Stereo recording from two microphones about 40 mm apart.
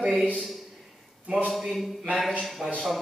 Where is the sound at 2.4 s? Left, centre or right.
Centre.